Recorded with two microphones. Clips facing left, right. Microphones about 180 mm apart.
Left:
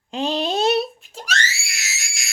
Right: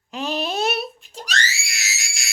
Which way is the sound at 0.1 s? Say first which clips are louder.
Left 3 dB; 25° left (ahead or behind).